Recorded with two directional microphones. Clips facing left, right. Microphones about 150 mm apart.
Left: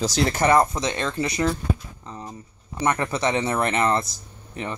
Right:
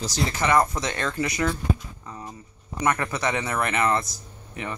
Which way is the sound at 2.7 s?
25° left (ahead or behind).